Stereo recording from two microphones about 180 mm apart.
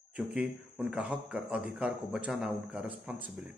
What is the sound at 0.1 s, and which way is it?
Speech, 5° right (ahead or behind).